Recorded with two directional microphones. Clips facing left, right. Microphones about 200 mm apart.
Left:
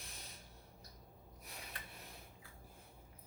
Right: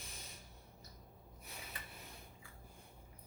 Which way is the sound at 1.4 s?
Centre (ahead or behind).